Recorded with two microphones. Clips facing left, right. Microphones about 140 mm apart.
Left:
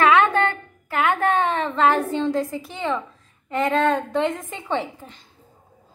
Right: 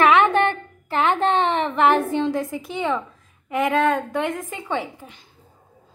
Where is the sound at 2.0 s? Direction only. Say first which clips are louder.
Even; 15° right (ahead or behind).